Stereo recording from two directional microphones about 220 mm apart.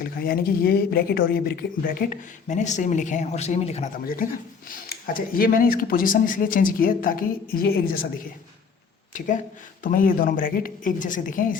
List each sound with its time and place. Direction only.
0.0 s speech: 40° left (ahead or behind)
9.1 s speech: 35° left (ahead or behind)